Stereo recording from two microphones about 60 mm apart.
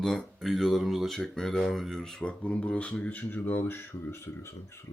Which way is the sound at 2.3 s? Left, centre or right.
Left.